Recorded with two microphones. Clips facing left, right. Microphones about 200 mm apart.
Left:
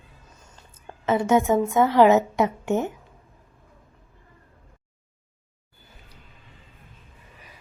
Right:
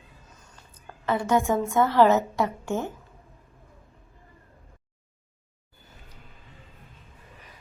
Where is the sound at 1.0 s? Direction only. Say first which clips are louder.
Left 4 dB; 20° left (ahead or behind).